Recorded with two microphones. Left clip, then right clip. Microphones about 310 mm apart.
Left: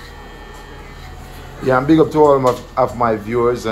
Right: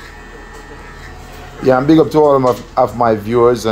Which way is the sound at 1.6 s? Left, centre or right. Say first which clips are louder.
Right 3 dB; right.